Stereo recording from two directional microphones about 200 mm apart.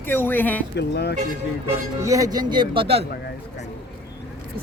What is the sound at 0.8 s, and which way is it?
Speech, 55° left (ahead or behind).